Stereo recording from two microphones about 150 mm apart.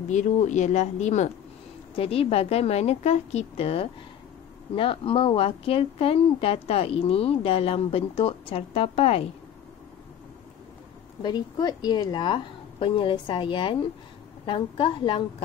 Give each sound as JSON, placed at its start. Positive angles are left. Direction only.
{"t": 0.1, "sound": "a woman's voice", "side_deg": 55}
{"t": 11.2, "sound": "a woman's voice", "side_deg": 30}